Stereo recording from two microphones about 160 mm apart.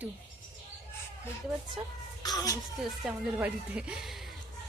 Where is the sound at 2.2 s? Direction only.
25° left (ahead or behind).